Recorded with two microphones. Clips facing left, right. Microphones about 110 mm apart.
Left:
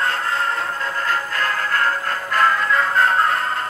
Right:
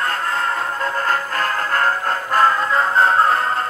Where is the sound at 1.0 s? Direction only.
45° right (ahead or behind).